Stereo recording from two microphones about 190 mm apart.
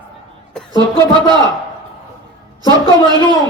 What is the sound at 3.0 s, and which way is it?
Speech, 20° right (ahead or behind).